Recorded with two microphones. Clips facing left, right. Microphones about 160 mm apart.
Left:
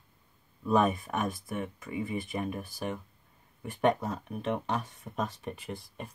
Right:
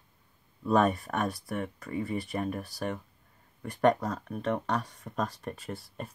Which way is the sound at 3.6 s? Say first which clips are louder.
Right 2 dB; centre (ahead or behind).